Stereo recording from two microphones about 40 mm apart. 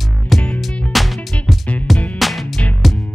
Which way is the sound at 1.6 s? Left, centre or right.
Left.